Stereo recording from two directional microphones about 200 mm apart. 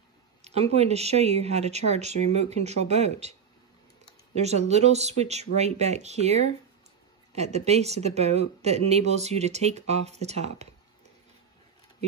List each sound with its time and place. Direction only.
0.4 s a sound: 30° right (ahead or behind)
0.7 s speech: 30° right (ahead or behind)
4.4 s speech: 35° right (ahead or behind)